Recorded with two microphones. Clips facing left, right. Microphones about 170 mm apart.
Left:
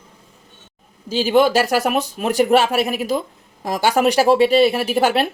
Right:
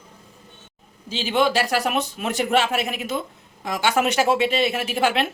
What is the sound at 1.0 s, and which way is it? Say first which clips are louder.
A man's voice: left 6 dB; 45° left (ahead or behind).